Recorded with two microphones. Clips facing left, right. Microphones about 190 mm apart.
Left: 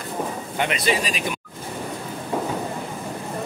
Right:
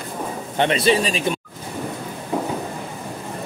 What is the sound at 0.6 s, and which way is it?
Speech, 30° right (ahead or behind).